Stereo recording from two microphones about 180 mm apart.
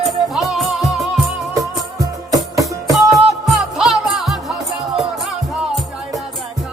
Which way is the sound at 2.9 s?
Centre (ahead or behind).